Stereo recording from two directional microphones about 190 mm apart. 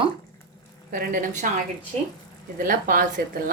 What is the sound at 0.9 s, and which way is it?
Speech, 45° right (ahead or behind).